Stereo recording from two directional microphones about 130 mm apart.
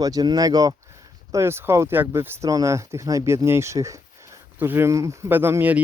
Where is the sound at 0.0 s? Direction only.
30° right (ahead or behind).